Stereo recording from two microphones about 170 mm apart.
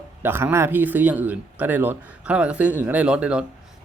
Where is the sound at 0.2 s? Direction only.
10° right (ahead or behind).